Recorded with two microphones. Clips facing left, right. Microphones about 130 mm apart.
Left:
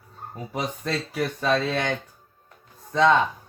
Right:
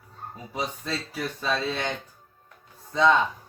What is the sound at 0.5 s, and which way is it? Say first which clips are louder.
Speech: left 3 dB; 55° left (ahead or behind).